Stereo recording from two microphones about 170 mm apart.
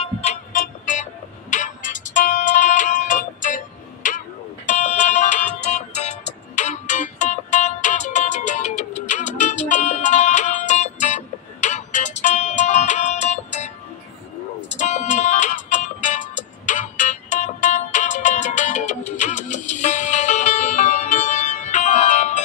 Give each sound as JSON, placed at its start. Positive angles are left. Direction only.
{"t": 0.0, "sound": "music", "side_deg": 40}
{"t": 14.7, "sound": "music", "side_deg": 45}